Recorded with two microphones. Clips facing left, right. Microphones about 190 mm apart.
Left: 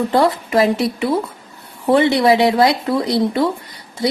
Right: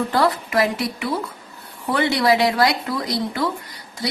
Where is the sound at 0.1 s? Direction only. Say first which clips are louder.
Left 4 dB; 25° left (ahead or behind).